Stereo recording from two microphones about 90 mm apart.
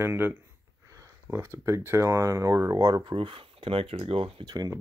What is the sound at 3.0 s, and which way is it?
Speech, 75° right (ahead or behind).